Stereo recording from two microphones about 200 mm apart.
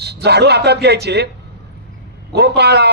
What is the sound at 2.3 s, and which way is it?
Speech, 55° right (ahead or behind).